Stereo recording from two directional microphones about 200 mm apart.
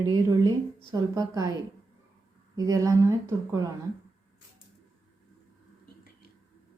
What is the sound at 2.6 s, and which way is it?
A woman's voice, 15° right (ahead or behind).